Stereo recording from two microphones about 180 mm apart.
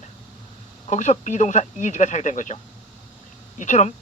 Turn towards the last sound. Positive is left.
turn(degrees=45)  # may be behind; listen again after turning